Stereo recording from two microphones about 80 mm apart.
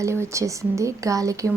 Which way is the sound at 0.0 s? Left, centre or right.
Right.